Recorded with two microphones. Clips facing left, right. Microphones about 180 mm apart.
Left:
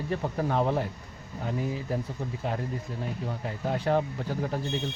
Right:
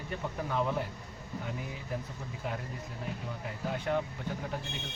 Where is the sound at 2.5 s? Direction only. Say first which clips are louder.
Left 6 dB; 30° left (ahead or behind).